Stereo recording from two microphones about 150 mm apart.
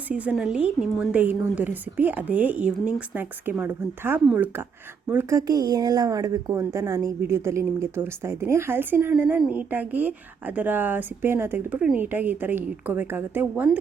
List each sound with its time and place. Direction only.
0.1 s a woman's voice: 10° right (ahead or behind)